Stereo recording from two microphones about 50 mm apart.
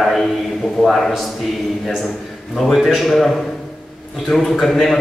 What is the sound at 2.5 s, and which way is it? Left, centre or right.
A man's voice, centre.